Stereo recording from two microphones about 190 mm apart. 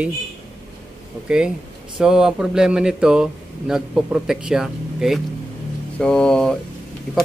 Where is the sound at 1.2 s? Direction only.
5° right (ahead or behind).